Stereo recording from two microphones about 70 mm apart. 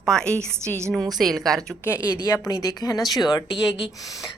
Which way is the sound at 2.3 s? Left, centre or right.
Left.